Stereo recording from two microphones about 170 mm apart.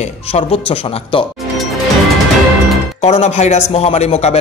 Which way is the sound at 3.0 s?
40° left (ahead or behind).